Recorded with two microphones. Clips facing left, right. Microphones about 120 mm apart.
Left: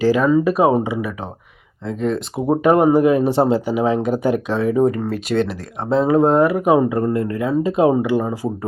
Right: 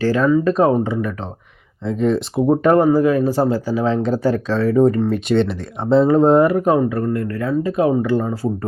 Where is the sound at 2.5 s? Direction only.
10° left (ahead or behind).